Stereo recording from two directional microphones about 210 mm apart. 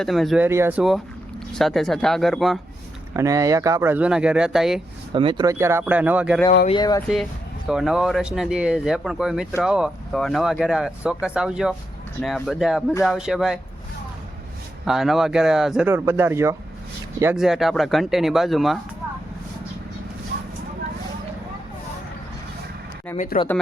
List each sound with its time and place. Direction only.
0.0 s speech: centre (ahead or behind)
3.2 s speech: 15° right (ahead or behind)
5.1 s speech: 25° right (ahead or behind); by 6.4 s 5° right (ahead or behind)
6.7 s speech: 20° left (ahead or behind)
7.7 s speech: centre (ahead or behind)
14.8 s speech: centre (ahead or behind)
17.3 s speech: centre (ahead or behind)
23.1 s speech: 40° left (ahead or behind)